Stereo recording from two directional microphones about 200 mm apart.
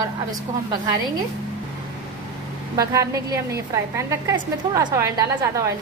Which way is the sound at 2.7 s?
15° right (ahead or behind).